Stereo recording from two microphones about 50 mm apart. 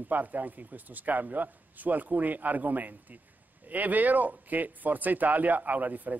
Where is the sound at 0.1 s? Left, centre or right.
Right.